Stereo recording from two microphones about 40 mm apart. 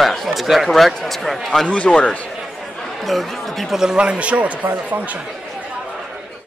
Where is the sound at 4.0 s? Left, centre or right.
Right.